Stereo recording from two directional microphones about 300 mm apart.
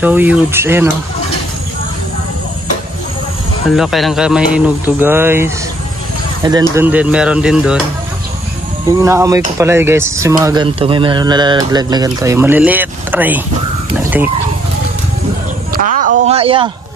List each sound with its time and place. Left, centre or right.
0.0 s speech: centre
3.7 s speech: centre
6.7 s speech: centre
8.8 s speech: centre
13.9 s a sound: centre
15.7 s a sound: right